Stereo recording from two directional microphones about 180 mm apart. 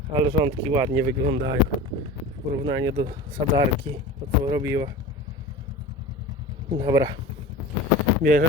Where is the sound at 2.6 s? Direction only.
20° right (ahead or behind).